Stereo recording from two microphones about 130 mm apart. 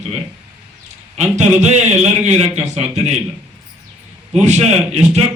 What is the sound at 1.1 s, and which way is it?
A man's voice, 60° right (ahead or behind).